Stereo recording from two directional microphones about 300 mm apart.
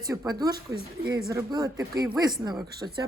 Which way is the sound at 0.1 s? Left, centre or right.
Centre.